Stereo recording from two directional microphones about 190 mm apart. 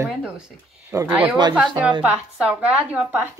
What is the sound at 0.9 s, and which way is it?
Speech, 10° right (ahead or behind).